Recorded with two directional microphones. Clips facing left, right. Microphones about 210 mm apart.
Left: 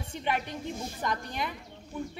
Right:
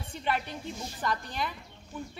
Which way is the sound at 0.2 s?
15° left (ahead or behind).